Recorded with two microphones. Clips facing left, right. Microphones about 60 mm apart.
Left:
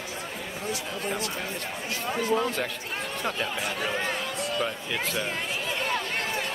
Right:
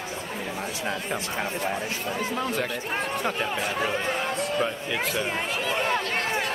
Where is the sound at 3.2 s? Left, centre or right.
Centre.